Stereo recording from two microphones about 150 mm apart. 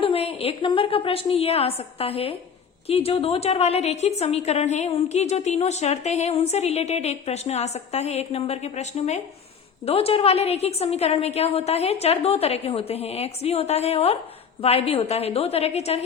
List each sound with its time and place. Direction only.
0.0 s a woman's voice: 40° left (ahead or behind)